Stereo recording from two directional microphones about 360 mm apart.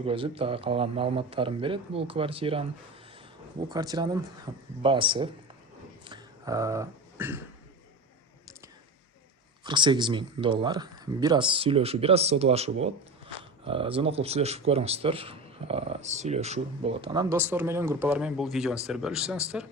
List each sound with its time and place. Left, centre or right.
0.0 s speech: centre
3.7 s speech: centre
6.1 s throat clearing: centre
9.6 s speech: centre